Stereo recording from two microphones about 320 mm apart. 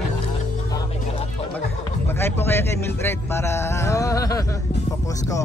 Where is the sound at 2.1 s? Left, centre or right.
Centre.